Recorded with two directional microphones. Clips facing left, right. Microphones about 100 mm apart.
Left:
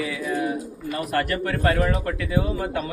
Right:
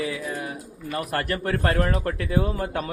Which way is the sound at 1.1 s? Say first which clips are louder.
Left 2 dB; 30° right (ahead or behind).